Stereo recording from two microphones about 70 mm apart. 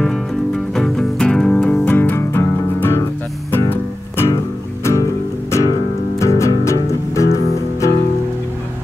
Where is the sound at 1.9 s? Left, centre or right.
Left.